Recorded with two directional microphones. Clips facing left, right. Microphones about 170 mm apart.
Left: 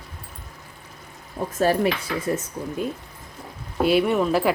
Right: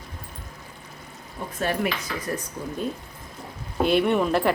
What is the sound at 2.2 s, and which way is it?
Speech, 25° left (ahead or behind).